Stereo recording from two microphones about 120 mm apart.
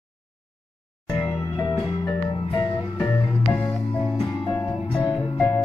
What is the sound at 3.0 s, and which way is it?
Music, 15° left (ahead or behind).